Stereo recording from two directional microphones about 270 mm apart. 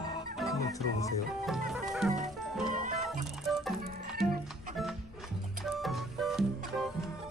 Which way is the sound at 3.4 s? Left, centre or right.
Centre.